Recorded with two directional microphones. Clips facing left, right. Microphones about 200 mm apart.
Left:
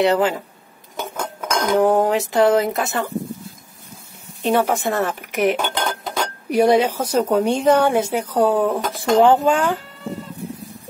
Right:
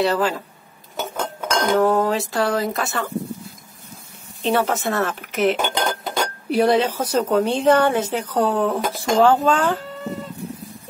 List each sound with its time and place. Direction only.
0.0 s speech: 20° left (ahead or behind)
1.1 s speech: 10° left (ahead or behind)
4.4 s a woman's voice: 10° left (ahead or behind)
5.6 s dishes: 10° right (ahead or behind)
6.5 s a woman's voice: 15° left (ahead or behind)